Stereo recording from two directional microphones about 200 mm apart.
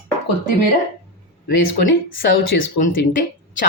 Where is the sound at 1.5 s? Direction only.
70° left (ahead or behind).